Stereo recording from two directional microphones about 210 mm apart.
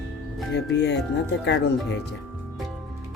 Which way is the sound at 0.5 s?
55° left (ahead or behind).